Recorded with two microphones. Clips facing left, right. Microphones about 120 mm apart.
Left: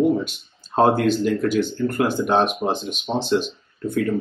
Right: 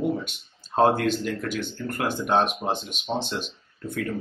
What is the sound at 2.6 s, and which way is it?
Speech, 35° left (ahead or behind).